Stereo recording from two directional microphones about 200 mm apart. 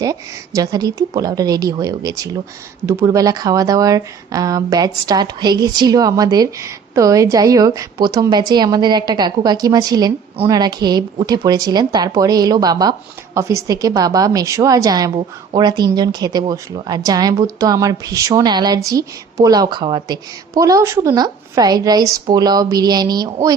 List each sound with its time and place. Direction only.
0.0 s a woman's voice: 15° right (ahead or behind)